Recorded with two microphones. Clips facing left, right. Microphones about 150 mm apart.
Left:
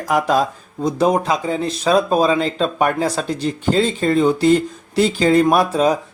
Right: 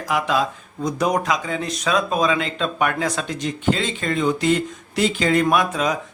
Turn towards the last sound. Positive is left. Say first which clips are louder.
# left 5 dB
turn(degrees=35)  # may be behind; listen again after turning